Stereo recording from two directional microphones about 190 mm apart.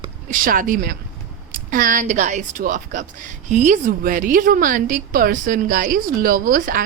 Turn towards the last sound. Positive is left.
turn(degrees=-50)  # may be behind; listen again after turning